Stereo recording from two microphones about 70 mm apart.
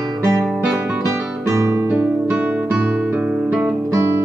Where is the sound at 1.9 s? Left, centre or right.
Centre.